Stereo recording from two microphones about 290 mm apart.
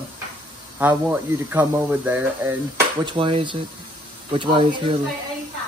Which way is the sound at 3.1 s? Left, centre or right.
Centre.